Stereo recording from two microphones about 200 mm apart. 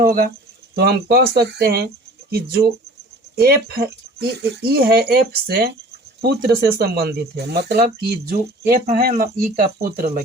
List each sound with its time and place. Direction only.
0.0 s speech: 45° right (ahead or behind)